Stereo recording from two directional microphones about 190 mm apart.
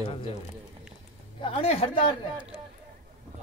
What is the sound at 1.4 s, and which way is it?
Speech, 30° left (ahead or behind).